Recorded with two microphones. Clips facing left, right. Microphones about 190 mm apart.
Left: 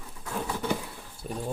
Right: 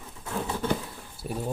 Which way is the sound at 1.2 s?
5° right (ahead or behind).